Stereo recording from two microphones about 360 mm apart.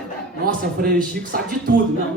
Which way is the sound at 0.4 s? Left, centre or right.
Right.